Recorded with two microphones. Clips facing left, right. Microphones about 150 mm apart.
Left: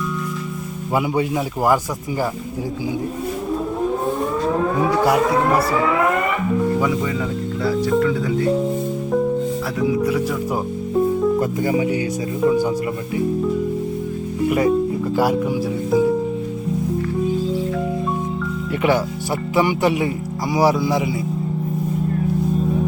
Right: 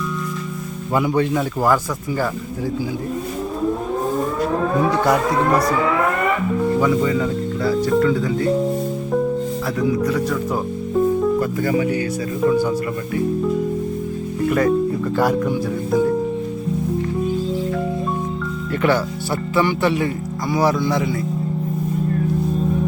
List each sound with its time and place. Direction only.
9.8 s speech: 10° left (ahead or behind)
14.4 s speech: 15° left (ahead or behind)
18.8 s speech: 10° left (ahead or behind)